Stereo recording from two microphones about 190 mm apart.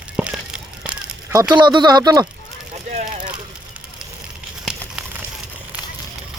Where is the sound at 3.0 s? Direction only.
45° right (ahead or behind).